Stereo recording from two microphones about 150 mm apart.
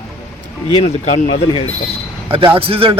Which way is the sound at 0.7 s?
45° left (ahead or behind).